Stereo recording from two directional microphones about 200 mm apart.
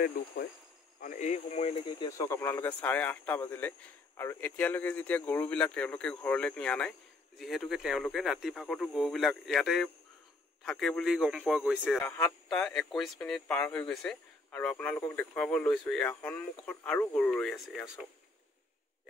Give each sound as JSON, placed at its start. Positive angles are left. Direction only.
{"t": 0.2, "sound": "speech", "side_deg": 50}
{"t": 11.8, "sound": "speech", "side_deg": 5}